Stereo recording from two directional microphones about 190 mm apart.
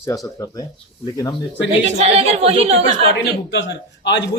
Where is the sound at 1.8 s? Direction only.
35° right (ahead or behind).